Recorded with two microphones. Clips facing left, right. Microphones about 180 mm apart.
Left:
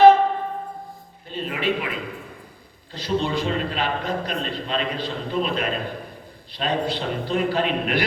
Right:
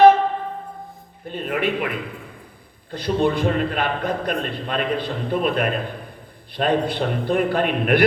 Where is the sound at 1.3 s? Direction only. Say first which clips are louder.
Right 2 dB; 55° right (ahead or behind).